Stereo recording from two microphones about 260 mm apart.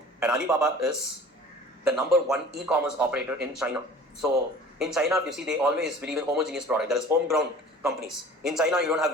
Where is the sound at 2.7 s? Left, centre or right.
Centre.